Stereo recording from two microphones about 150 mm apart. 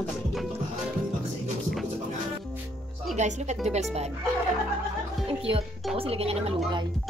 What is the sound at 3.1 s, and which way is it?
Speech, 50° right (ahead or behind).